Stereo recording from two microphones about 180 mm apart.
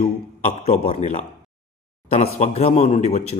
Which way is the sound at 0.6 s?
35° left (ahead or behind).